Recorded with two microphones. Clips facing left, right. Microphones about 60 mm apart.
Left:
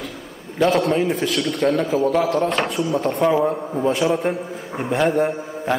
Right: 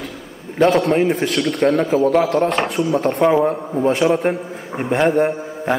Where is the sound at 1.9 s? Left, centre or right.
Right.